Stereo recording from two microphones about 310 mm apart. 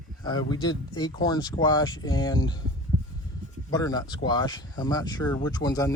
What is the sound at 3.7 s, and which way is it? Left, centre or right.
Speech, centre.